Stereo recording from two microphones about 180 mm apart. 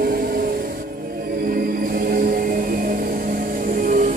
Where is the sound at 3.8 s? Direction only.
45° right (ahead or behind).